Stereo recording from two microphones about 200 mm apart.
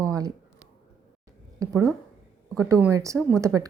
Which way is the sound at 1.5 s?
15° right (ahead or behind).